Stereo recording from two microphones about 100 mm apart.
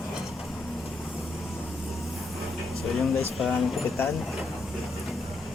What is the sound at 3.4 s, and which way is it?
Speech, centre (ahead or behind).